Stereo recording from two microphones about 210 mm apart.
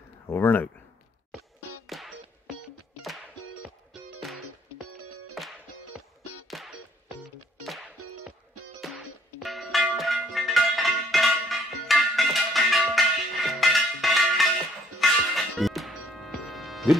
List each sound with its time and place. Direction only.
0.3 s speech: 10° left (ahead or behind)
1.9 s music: centre (ahead or behind)
3.3 s music: 90° left
4.7 s music: 90° right
5.9 s music: centre (ahead or behind)
8.0 s music: 90° right
8.8 s music: centre (ahead or behind)